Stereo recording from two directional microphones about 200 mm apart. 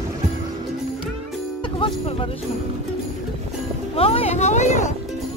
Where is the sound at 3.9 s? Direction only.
30° left (ahead or behind).